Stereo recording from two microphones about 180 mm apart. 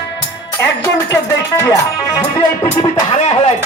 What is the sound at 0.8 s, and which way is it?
Speech, 15° left (ahead or behind).